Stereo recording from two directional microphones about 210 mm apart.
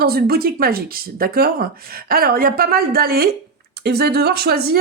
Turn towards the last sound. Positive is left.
turn(degrees=-45)  # may be behind; listen again after turning